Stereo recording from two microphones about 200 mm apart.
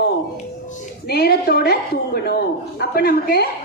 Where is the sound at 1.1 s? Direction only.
50° left (ahead or behind).